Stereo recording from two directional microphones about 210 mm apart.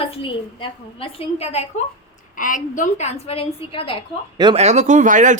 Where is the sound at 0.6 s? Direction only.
25° left (ahead or behind).